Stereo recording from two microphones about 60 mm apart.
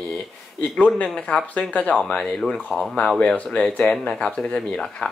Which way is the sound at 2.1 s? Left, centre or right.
Centre.